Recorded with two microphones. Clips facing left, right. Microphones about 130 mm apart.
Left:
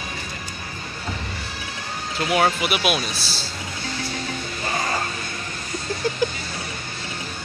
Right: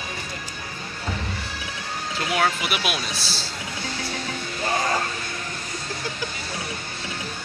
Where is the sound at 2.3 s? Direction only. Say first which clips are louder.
Left 4 dB; 15° left (ahead or behind).